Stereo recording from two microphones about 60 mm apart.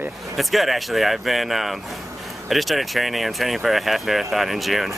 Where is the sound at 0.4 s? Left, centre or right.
Centre.